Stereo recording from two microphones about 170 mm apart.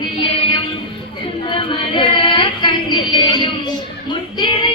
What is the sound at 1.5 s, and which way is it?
Child singing, 30° left (ahead or behind).